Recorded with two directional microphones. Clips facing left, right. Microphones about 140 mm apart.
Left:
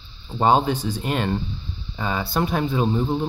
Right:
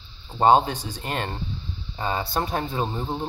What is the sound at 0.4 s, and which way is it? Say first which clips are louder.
Speech: even; 30° right (ahead or behind).